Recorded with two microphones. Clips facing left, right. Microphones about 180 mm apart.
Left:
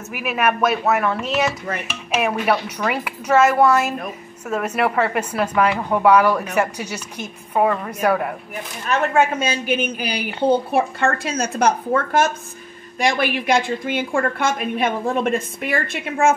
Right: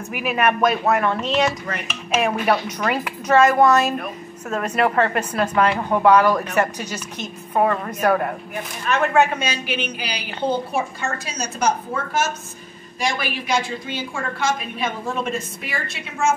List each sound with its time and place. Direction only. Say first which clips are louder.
0.1 s a woman's voice: even; 5° left (ahead or behind)
8.8 s a woman's voice: even; 45° left (ahead or behind)